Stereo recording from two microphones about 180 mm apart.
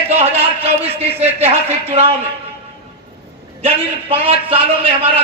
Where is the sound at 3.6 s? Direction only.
35° right (ahead or behind).